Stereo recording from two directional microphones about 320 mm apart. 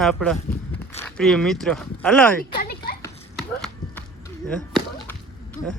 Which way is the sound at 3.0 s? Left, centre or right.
Centre.